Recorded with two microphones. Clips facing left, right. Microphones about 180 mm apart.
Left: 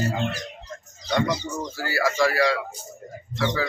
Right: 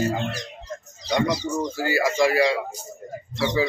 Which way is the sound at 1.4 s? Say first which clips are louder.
Right 5 dB; 10° right (ahead or behind).